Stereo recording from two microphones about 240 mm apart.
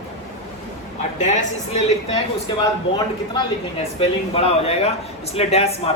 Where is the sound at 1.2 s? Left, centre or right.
Left.